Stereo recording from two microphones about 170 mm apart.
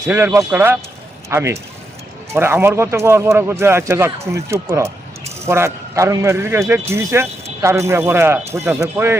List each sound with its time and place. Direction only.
0.0 s a man's voice: 15° right (ahead or behind)